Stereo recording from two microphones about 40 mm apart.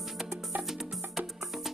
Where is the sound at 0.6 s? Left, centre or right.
Centre.